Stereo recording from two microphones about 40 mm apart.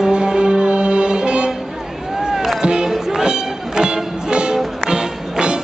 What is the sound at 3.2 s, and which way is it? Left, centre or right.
Music, centre.